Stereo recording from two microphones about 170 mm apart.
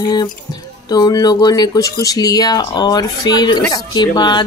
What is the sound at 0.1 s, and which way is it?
Speech, 25° left (ahead or behind).